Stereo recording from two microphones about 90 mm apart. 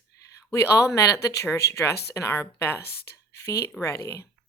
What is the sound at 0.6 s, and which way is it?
Speech, 35° left (ahead or behind).